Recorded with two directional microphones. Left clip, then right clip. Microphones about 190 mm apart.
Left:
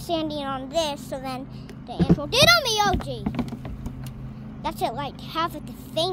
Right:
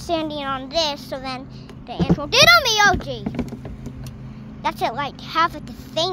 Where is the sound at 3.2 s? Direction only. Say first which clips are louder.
Right 2 dB; 45° left (ahead or behind).